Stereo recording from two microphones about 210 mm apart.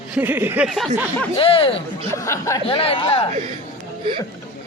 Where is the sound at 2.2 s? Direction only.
15° left (ahead or behind).